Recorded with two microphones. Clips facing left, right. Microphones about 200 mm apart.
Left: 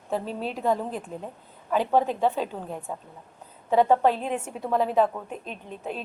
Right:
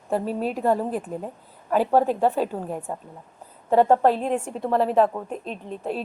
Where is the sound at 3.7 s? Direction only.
35° right (ahead or behind).